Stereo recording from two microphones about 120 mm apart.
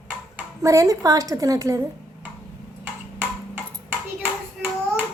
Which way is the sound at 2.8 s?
15° right (ahead or behind).